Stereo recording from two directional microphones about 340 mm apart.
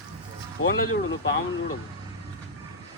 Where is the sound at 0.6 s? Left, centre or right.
Left.